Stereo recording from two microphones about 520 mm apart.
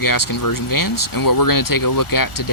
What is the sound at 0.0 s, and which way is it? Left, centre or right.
Speech, left.